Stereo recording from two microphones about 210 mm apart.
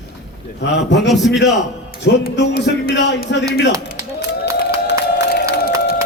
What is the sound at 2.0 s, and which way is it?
A woman's voice, 50° left (ahead or behind).